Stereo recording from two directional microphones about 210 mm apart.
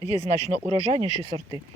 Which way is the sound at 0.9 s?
20° right (ahead or behind).